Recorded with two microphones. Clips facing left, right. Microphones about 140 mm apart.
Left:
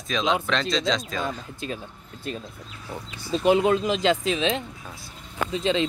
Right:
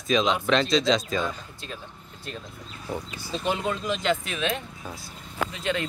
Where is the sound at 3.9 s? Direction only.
90° left.